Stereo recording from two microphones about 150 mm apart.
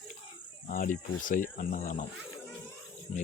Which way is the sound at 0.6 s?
60° left (ahead or behind).